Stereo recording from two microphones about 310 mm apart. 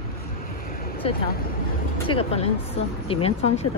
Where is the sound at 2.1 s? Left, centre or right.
Centre.